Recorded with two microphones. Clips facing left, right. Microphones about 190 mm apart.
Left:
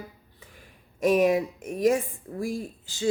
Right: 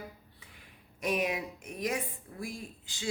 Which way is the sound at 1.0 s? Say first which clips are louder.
Left 11 dB; 45° left (ahead or behind).